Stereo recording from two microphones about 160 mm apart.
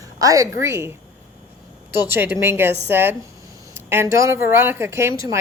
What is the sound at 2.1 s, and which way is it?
A woman's voice, 15° right (ahead or behind).